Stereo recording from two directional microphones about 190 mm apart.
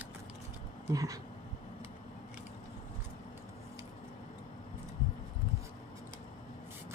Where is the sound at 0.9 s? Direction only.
15° right (ahead or behind).